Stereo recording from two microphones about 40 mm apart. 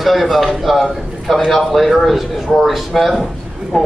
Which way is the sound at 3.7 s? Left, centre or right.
Centre.